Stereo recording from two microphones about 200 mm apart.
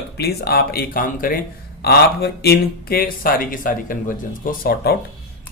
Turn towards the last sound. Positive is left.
turn(degrees=50)  # may be behind; listen again after turning